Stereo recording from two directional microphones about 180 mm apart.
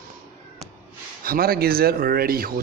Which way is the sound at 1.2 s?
55° right (ahead or behind).